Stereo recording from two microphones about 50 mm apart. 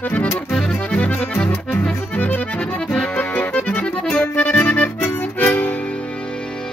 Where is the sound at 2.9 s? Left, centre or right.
Centre.